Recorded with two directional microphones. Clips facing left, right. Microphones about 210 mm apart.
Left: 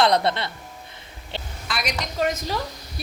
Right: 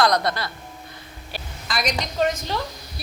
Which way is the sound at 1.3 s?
25° left (ahead or behind).